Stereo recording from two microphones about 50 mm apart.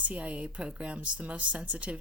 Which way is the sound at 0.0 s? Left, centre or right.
Right.